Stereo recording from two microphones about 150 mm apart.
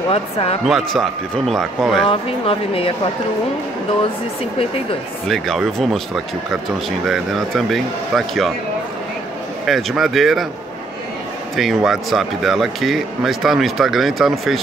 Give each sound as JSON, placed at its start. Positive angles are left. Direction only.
{"t": 0.1, "sound": "speech", "side_deg": 40}
{"t": 0.7, "sound": "speech", "side_deg": 0}
{"t": 2.0, "sound": "speech", "side_deg": 40}
{"t": 5.3, "sound": "speech", "side_deg": 0}
{"t": 9.7, "sound": "speech", "side_deg": 0}
{"t": 11.5, "sound": "speech", "side_deg": 0}